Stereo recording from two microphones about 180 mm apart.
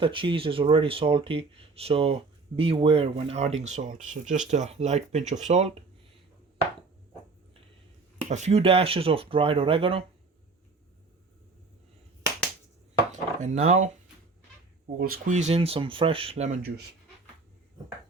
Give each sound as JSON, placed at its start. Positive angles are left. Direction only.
{"t": 0.0, "sound": "speech", "side_deg": -30}
{"t": 8.3, "sound": "speech", "side_deg": -40}
{"t": 13.1, "sound": "chopping", "side_deg": -40}
{"t": 14.9, "sound": "speech", "side_deg": -55}
{"t": 15.4, "sound": "speech", "side_deg": -35}
{"t": 16.6, "sound": "speech", "side_deg": -65}